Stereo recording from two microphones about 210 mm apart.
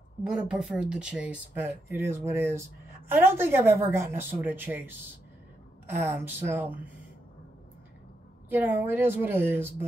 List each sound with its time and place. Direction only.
0.2 s a woman's voice: 5° right (ahead or behind)
8.5 s a woman's voice: 10° right (ahead or behind)